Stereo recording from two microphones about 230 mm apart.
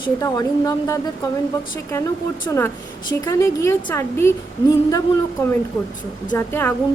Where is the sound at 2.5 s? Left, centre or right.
Centre.